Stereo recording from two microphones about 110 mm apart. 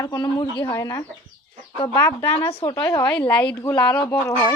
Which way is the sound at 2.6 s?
40° left (ahead or behind).